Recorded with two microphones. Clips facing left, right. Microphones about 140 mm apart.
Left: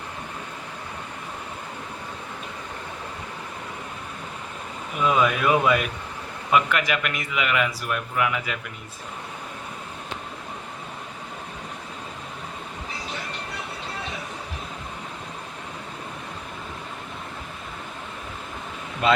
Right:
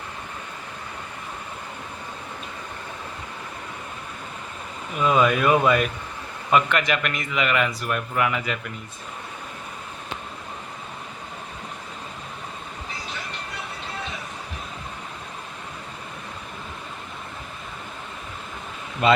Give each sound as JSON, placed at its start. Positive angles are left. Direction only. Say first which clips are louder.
{"t": 5.0, "sound": "a man's voice", "louder": "right 2 dB", "side_deg": 5}
{"t": 19.0, "sound": "a man's voice", "louder": "right 2 dB", "side_deg": 0}